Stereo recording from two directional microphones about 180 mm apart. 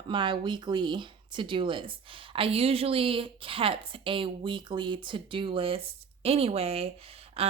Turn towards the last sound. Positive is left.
turn(degrees=-35)  # may be behind; listen again after turning